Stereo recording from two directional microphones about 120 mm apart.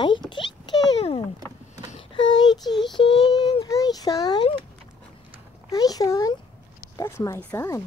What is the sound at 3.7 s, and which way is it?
Speech, 30° left (ahead or behind).